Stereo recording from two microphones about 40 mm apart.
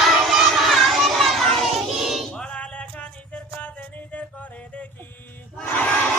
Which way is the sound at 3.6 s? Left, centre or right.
Left.